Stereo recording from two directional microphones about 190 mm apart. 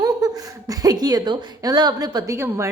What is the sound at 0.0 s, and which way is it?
A woman's voice, 20° right (ahead or behind).